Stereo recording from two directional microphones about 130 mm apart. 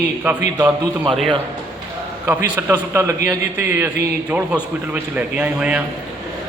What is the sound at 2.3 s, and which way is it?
A man's voice, 20° right (ahead or behind).